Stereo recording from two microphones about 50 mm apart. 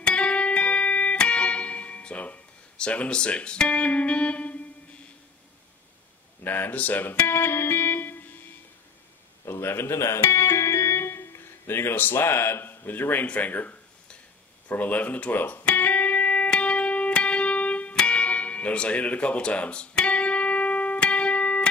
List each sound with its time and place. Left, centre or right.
0.0 s music: left
6.4 s speech: left
7.2 s music: left
9.5 s speech: left
15.3 s speech: left
15.7 s music: left